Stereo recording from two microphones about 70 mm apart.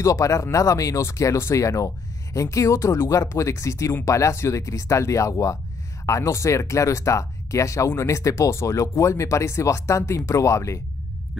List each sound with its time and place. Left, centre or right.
0.0 s speech: left